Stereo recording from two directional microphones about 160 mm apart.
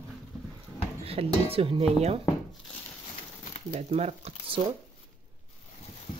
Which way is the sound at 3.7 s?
45° right (ahead or behind).